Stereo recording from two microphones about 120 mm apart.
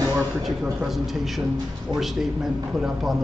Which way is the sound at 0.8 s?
Centre (ahead or behind).